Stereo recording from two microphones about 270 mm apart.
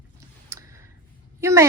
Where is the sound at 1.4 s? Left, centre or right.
Centre.